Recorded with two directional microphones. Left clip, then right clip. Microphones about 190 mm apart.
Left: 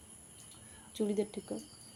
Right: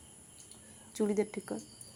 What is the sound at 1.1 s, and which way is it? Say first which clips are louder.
Speech: right 2 dB; 45° right (ahead or behind).